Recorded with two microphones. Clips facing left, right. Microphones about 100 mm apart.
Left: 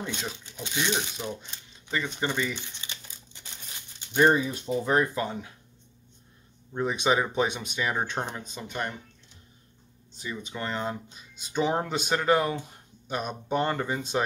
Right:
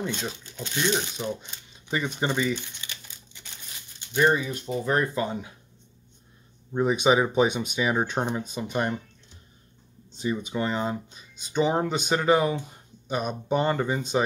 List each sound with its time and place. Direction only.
0.0 s speech: centre (ahead or behind)
1.9 s speech: 15° right (ahead or behind)
2.8 s crumpling: 30° left (ahead or behind)
4.1 s speech: 20° left (ahead or behind)
5.1 s speech: 5° right (ahead or behind)
6.7 s speech: 10° right (ahead or behind)
10.1 s speech: 25° right (ahead or behind)
10.4 s speech: 15° right (ahead or behind)